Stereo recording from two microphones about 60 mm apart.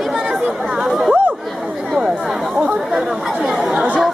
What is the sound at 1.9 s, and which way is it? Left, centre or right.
Chatter, centre.